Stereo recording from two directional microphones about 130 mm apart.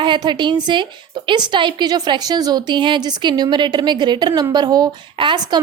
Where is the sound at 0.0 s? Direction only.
35° right (ahead or behind).